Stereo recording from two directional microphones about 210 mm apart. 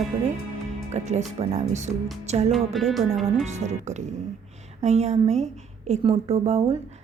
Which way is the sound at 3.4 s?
35° right (ahead or behind).